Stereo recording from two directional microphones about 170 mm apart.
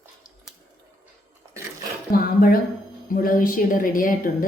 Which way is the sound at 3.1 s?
55° left (ahead or behind).